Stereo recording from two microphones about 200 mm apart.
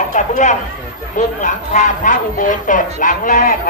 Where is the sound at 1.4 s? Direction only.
40° left (ahead or behind).